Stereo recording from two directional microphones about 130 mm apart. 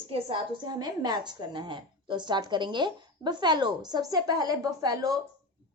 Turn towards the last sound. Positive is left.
turn(degrees=-25)  # may be behind; listen again after turning